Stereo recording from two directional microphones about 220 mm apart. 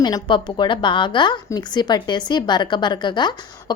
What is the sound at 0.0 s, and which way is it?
A woman's voice, 20° left (ahead or behind).